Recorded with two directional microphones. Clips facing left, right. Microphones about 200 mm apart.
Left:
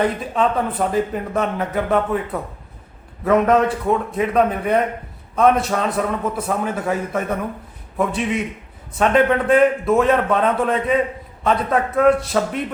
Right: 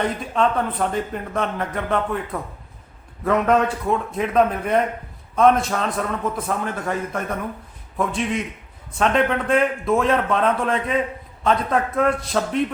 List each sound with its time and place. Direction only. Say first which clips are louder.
0.0 s speech: left 2 dB; 5° left (ahead or behind)
3.9 s speech: right 1 dB; centre (ahead or behind)